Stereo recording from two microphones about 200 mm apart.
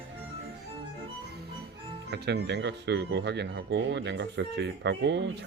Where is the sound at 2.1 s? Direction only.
60° right (ahead or behind).